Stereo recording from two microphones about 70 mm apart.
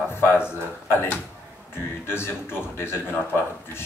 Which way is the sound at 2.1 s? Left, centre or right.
Left.